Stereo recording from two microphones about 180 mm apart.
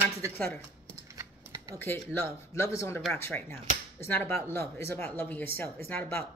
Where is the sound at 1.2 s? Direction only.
20° right (ahead or behind).